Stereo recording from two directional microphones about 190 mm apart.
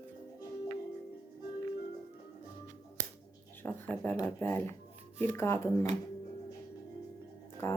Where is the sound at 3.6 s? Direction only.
10° left (ahead or behind).